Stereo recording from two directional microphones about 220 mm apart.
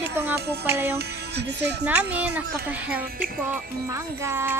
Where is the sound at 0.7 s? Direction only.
10° right (ahead or behind).